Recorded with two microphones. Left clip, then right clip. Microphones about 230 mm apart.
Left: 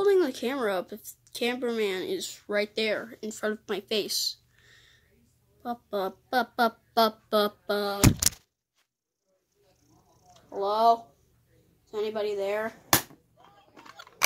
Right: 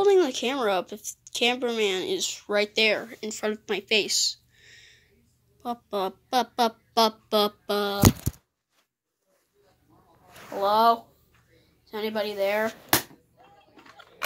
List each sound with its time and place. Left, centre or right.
0.0 s speech: centre
10.5 s a woman's voice: right
13.7 s tick-tock: left